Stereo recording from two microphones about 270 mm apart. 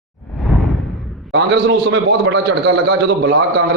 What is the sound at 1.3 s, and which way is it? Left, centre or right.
A man's voice, right.